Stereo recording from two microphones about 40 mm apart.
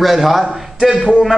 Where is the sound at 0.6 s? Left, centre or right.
Centre.